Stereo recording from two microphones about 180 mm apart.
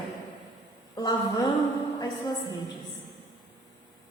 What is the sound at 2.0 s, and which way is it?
Speech, 25° left (ahead or behind).